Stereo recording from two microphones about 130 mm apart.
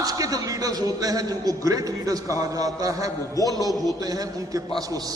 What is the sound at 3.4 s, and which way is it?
Speech, 30° left (ahead or behind).